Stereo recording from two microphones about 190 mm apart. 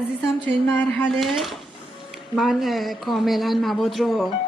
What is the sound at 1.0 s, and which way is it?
Speech, centre (ahead or behind).